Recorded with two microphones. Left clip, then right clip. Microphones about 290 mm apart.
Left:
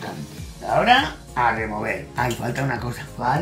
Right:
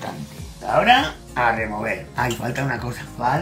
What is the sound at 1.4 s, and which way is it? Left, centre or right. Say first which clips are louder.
Speech: right 1 dB; centre.